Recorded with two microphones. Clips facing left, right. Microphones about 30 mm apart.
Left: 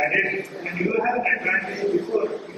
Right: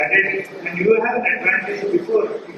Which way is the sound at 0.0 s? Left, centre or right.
Right.